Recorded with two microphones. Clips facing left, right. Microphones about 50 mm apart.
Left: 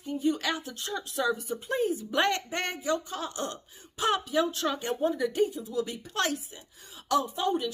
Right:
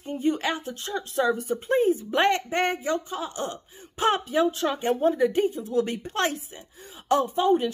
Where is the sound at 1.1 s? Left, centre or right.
Right.